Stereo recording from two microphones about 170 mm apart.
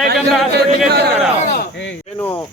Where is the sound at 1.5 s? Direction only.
90° left.